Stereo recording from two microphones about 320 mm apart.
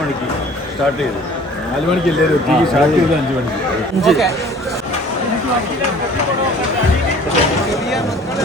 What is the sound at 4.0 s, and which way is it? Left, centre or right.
Speech, centre.